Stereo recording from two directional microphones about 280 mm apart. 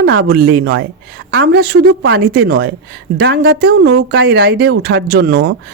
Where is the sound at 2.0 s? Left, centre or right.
Right.